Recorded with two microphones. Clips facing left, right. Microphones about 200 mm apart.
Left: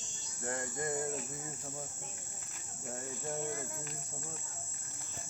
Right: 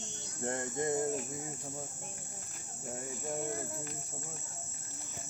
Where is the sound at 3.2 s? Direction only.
10° right (ahead or behind).